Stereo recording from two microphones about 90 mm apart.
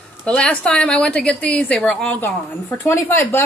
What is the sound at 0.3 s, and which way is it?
A woman's voice, 10° left (ahead or behind).